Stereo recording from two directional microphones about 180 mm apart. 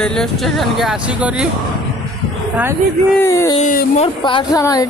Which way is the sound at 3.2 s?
15° left (ahead or behind).